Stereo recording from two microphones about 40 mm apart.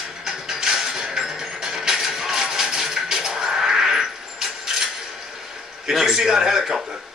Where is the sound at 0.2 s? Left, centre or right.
Centre.